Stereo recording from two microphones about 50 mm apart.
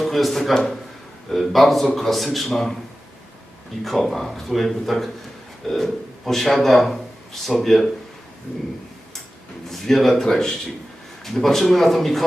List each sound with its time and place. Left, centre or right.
0.0 s a man's voice: centre
2.5 s speech: centre
3.8 s a man's voice: centre
9.6 s speech: centre